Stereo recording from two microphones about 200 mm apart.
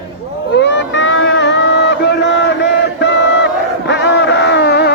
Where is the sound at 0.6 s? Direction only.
65° left (ahead or behind).